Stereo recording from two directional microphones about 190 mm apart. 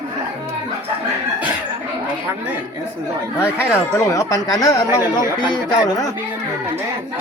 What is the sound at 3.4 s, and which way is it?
Speech, 15° left (ahead or behind).